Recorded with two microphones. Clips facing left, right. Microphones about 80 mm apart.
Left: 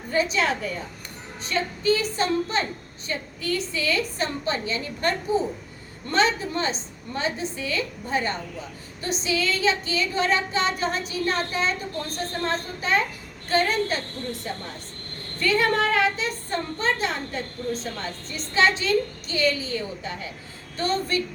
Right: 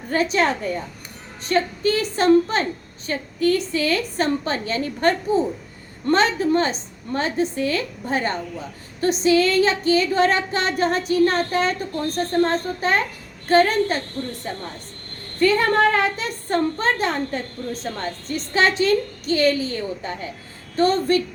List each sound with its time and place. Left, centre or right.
0.1 s a woman's voice: right
15.4 s speech: right
18.3 s a woman's voice: right